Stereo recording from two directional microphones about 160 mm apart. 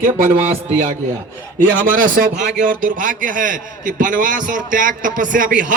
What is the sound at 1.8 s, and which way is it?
A man's voice, 60° right (ahead or behind).